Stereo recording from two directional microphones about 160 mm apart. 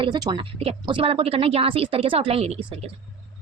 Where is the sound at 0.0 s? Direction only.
30° right (ahead or behind).